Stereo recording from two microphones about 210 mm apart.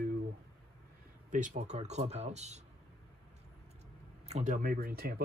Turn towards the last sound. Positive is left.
turn(degrees=-45)  # may be behind; listen again after turning